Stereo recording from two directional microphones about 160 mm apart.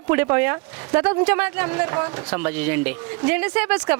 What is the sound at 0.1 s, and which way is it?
Speech, 10° right (ahead or behind).